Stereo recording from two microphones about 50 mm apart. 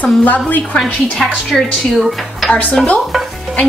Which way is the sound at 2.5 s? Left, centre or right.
Left.